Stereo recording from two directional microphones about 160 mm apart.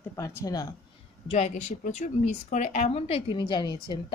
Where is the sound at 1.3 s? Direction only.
45° left (ahead or behind).